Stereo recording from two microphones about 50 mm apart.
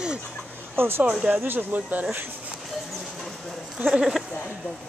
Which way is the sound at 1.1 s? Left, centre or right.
Right.